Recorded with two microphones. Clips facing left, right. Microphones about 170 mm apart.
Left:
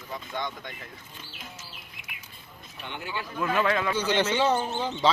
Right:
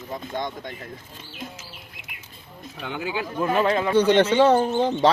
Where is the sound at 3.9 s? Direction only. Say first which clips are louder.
Right 8 dB; 60° right (ahead or behind).